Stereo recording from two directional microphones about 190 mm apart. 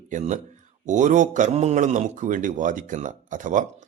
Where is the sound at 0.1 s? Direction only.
40° right (ahead or behind).